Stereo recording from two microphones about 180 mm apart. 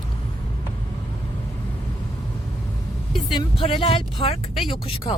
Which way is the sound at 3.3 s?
30° left (ahead or behind).